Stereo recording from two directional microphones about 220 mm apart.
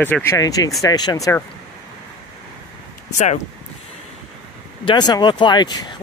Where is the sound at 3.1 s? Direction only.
30° left (ahead or behind).